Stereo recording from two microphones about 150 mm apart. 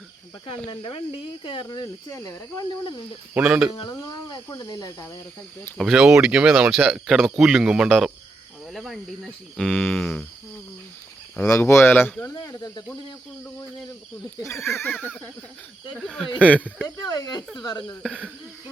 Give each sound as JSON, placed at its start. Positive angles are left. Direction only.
{"t": 0.7, "sound": "speech", "side_deg": 35}
{"t": 2.0, "sound": "speech", "side_deg": 20}
{"t": 3.3, "sound": "speech", "side_deg": -5}
{"t": 3.8, "sound": "speech", "side_deg": 25}
{"t": 5.7, "sound": "speech", "side_deg": 0}
{"t": 11.4, "sound": "speech", "side_deg": 20}
{"t": 14.4, "sound": "speech", "side_deg": 15}
{"t": 16.6, "sound": "speech", "side_deg": -10}
{"t": 16.8, "sound": "speech", "side_deg": 25}
{"t": 18.0, "sound": "speech", "side_deg": -10}